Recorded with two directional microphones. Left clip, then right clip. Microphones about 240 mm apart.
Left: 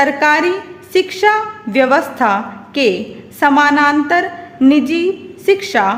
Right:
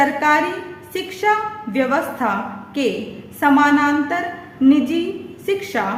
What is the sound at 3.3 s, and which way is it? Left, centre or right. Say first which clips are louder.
A woman's voice: left 4 dB; left.